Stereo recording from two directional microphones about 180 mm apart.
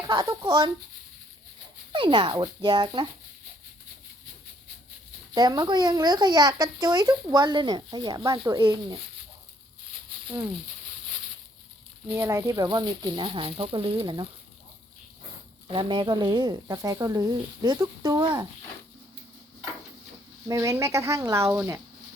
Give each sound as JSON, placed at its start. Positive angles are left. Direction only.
{"t": 0.1, "sound": "speech", "side_deg": -20}
{"t": 1.9, "sound": "speech", "side_deg": -25}
{"t": 5.3, "sound": "speech", "side_deg": -25}
{"t": 12.1, "sound": "speech", "side_deg": -15}
{"t": 15.6, "sound": "speech", "side_deg": -30}
{"t": 20.5, "sound": "speech", "side_deg": -20}